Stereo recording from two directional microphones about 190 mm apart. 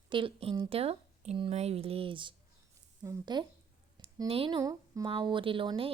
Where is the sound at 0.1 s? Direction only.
25° right (ahead or behind).